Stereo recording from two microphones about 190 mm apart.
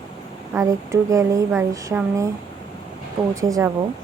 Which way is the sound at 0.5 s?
15° right (ahead or behind).